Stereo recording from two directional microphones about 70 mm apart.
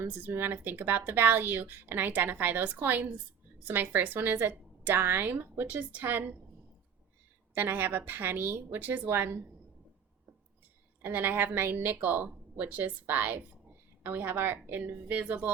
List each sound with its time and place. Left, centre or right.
0.0 s a woman's voice: right
7.5 s a woman's voice: right
11.0 s a woman's voice: right